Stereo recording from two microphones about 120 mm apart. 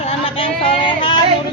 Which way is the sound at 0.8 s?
45° left (ahead or behind).